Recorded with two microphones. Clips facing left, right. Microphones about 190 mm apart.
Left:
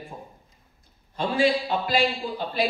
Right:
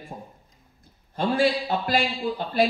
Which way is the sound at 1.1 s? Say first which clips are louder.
Even; 50° right (ahead or behind).